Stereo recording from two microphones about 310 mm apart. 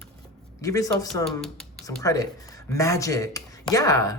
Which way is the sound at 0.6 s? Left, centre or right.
Centre.